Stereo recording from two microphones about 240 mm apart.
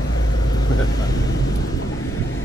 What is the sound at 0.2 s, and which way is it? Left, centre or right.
Vehicle, left.